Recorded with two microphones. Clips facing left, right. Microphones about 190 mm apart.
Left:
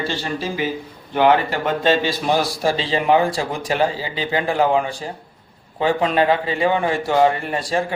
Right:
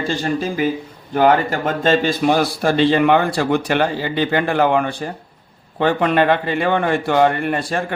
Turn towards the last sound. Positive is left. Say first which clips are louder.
# right 1 dB
turn(degrees=-55)  # may be behind; listen again after turning